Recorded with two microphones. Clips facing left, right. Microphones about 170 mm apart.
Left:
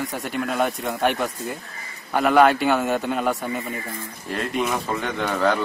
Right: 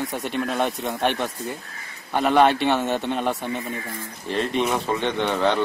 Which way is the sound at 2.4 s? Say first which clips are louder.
Left 1 dB; 25° right (ahead or behind).